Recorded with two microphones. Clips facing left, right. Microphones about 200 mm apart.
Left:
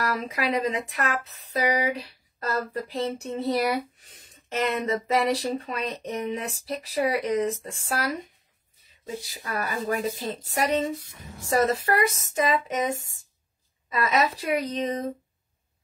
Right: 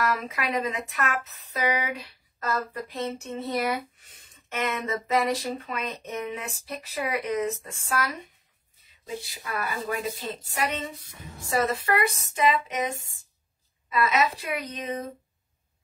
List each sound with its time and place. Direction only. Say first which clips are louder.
0.3 s speech: left 3 dB; 30° left (ahead or behind)
9.2 s speech: left 2 dB; 40° left (ahead or behind)